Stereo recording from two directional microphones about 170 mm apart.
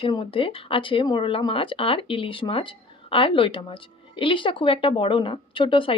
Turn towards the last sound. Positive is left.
turn(degrees=30)  # may be behind; listen again after turning